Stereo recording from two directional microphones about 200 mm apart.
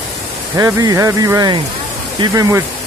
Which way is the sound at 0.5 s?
20° right (ahead or behind).